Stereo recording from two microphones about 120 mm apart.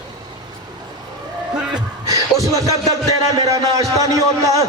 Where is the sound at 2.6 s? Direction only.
25° right (ahead or behind).